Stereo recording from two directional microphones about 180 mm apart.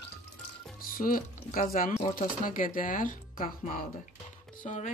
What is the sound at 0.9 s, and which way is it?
Speech, 50° left (ahead or behind).